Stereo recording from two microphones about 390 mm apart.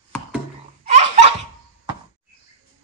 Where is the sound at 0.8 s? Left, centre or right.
Centre.